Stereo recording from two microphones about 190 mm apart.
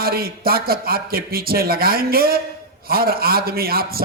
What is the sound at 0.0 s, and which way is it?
A man's voice, 50° right (ahead or behind).